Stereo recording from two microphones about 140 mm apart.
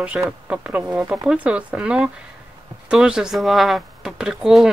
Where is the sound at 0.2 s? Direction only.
5° right (ahead or behind).